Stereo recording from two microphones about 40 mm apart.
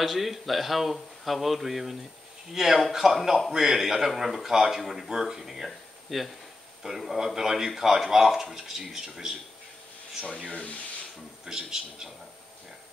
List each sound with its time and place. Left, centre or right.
0.0 s speech: centre
5.7 s a sound: centre
7.1 s speech: centre
11.4 s speech: centre